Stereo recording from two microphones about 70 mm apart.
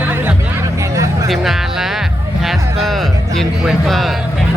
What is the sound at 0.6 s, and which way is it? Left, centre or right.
Hubbub, right.